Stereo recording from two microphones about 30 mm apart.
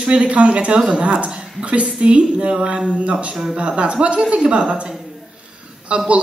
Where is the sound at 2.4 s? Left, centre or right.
Right.